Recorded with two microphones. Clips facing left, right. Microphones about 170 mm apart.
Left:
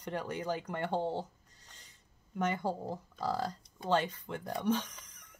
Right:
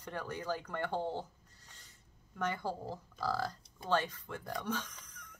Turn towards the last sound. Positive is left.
turn(degrees=20)  # may be behind; listen again after turning